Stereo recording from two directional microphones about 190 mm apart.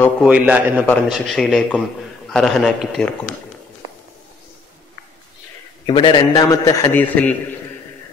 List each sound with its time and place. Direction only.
0.2 s a man's voice: 5° right (ahead or behind)
5.9 s a man's voice: 25° left (ahead or behind); by 7.3 s 10° left (ahead or behind)